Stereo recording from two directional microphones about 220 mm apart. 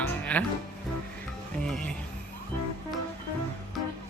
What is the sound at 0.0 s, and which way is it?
Music, 5° left (ahead or behind).